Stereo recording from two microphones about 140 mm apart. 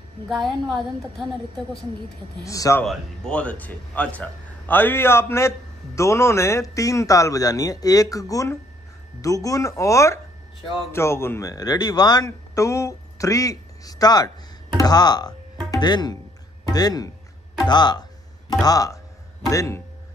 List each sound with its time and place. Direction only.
0.3 s a woman's voice: centre (ahead or behind)
2.4 s a man's voice: 25° left (ahead or behind)
2.8 s a man's voice: 5° left (ahead or behind); by 19.8 s 25° left (ahead or behind)